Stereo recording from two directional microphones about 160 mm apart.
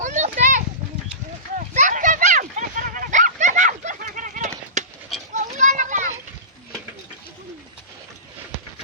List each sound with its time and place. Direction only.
0.0 s children playing: 50° right (ahead or behind)
1.5 s a sound: 50° right (ahead or behind)
5.5 s children playing: 50° right (ahead or behind)